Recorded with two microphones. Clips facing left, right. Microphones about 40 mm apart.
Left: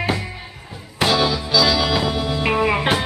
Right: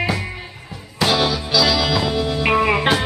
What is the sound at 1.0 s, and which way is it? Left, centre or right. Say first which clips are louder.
Music: even; left.